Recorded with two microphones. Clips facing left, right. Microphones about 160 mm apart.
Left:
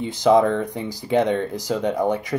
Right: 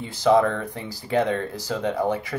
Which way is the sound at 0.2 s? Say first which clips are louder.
Left 2 dB; 15° left (ahead or behind).